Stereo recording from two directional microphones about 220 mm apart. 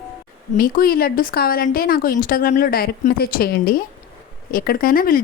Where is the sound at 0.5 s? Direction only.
40° left (ahead or behind).